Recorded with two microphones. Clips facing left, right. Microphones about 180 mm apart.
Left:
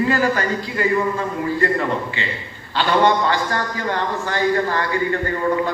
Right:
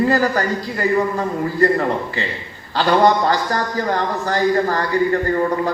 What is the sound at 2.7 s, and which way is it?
A man's voice, 40° right (ahead or behind).